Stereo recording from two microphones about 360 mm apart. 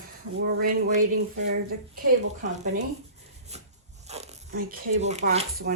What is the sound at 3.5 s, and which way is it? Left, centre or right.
Wood, centre.